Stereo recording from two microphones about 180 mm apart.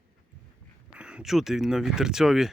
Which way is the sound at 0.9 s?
5° right (ahead or behind).